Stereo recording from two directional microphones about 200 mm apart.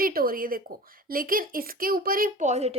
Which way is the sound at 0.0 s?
45° right (ahead or behind).